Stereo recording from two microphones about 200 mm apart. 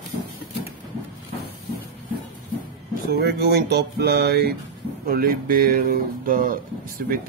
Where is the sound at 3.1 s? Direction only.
50° right (ahead or behind).